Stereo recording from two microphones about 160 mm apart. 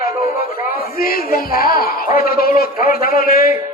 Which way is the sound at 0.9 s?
65° left (ahead or behind).